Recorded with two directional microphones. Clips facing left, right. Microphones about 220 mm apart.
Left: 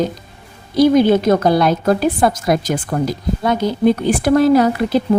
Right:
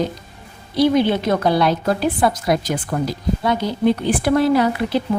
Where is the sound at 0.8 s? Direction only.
45° left (ahead or behind).